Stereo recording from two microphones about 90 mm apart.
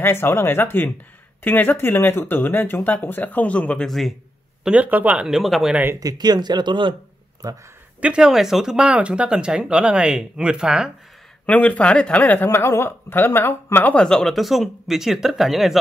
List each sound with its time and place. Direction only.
0.0 s speech: 25° left (ahead or behind); by 4.1 s 5° left (ahead or behind)
4.6 s speech: 20° right (ahead or behind)
5.4 s speech: centre (ahead or behind)
5.9 s speech: 45° right (ahead or behind); by 7.0 s 65° right (ahead or behind)
7.4 s speech: 40° right (ahead or behind)
8.0 s speech: 10° right (ahead or behind)
11.4 s speech: 15° left (ahead or behind)
12.4 s speech: 30° left (ahead or behind)
14.0 s speech: 5° left (ahead or behind)